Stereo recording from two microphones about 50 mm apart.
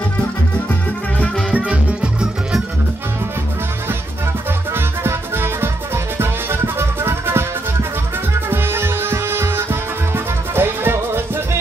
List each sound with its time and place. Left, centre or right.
1.5 s music: right
4.7 s music: right
8.5 s music: right